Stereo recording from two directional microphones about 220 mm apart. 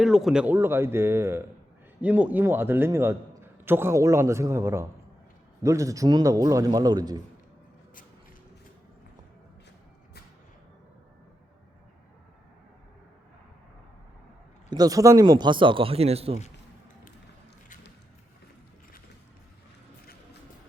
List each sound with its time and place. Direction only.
0.0 s a man's voice: centre (ahead or behind); by 7.2 s 15° right (ahead or behind)
14.7 s a man's voice: 15° right (ahead or behind)